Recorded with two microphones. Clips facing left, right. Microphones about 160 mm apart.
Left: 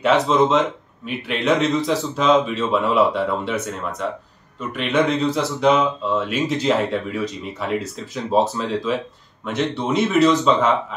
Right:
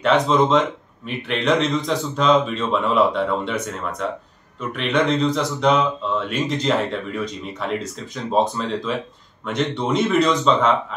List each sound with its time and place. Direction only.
0.0 s speech: 5° left (ahead or behind)